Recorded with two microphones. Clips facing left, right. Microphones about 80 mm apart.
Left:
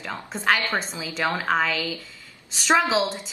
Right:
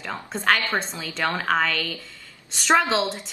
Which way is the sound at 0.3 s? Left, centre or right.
Centre.